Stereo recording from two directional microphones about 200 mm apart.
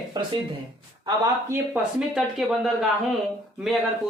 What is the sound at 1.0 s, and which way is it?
Speech, 15° right (ahead or behind).